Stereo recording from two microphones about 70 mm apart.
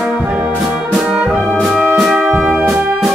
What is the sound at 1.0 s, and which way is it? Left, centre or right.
Brass instrument, centre.